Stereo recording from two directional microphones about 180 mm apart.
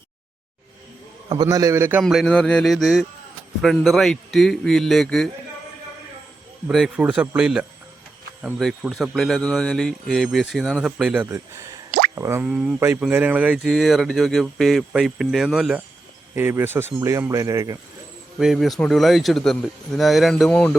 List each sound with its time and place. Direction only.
1.3 s speech: 20° right (ahead or behind); by 5.3 s 5° left (ahead or behind)
6.7 s speech: centre (ahead or behind); by 11.8 s 15° right (ahead or behind)
11.9 s drip: 55° right (ahead or behind)
12.1 s speech: 15° right (ahead or behind)
18.3 s speech: centre (ahead or behind)